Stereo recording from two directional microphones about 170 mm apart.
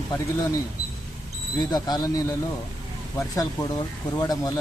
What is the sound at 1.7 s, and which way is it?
Speech, 20° left (ahead or behind).